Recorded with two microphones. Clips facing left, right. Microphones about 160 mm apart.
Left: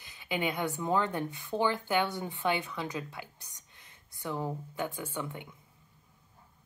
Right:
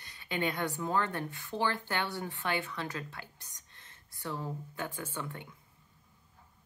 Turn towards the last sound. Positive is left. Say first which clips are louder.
# left 2 dB
turn(degrees=15)  # may be behind; listen again after turning